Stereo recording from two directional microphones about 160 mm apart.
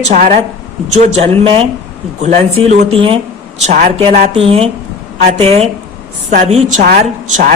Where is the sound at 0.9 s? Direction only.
40° right (ahead or behind).